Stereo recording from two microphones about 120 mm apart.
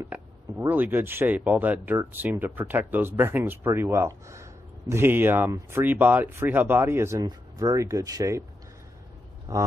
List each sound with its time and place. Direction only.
0.1 s speech: 15° right (ahead or behind)
7.2 s speech: 35° right (ahead or behind)
9.5 s speech: 25° right (ahead or behind)